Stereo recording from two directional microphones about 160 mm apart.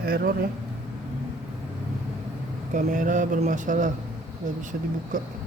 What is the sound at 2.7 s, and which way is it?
Speech, 55° right (ahead or behind).